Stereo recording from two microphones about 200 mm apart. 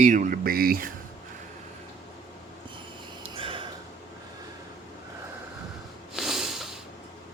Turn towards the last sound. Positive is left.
turn(degrees=0)  # may be behind; listen again after turning